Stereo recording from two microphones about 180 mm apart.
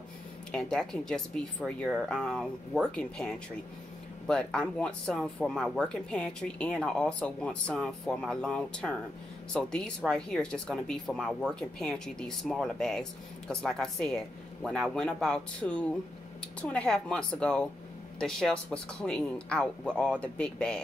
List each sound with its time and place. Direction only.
0.5 s speech: centre (ahead or behind)